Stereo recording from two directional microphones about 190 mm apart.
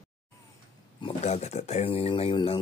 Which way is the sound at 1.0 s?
35° left (ahead or behind).